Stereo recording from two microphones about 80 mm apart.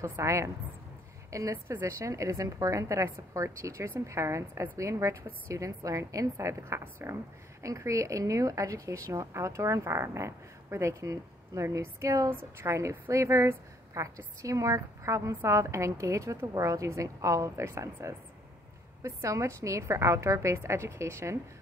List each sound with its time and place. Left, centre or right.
0.0 s a woman's voice: right